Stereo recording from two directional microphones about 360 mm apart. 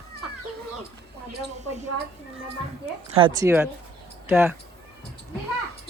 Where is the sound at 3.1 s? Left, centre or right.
Centre.